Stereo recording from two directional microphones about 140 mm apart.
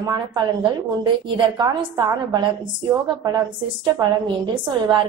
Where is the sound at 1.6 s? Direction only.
30° right (ahead or behind).